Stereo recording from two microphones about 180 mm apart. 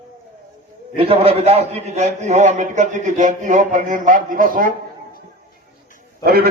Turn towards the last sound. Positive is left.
turn(degrees=-60)  # may be behind; listen again after turning